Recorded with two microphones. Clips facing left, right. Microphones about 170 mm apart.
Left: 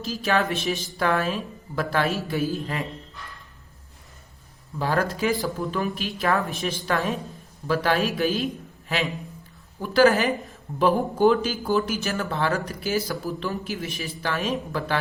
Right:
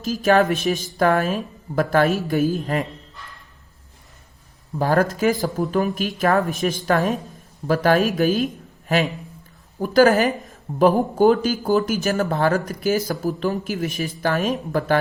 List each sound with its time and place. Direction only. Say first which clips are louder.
0.0 s speech: right 7 dB; 45° right (ahead or behind)
4.8 s a woman's voice: right 5 dB; 45° right (ahead or behind)
9.8 s speech: right 3 dB; 40° right (ahead or behind)